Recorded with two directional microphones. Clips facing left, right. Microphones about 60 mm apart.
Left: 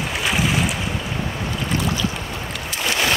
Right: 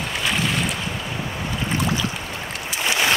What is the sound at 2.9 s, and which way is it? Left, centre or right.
Boat, centre.